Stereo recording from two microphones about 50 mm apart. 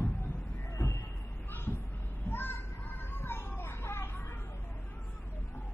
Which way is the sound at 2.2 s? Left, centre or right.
Left.